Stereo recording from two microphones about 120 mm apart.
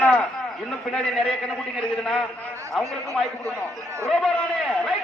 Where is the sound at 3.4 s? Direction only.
25° right (ahead or behind).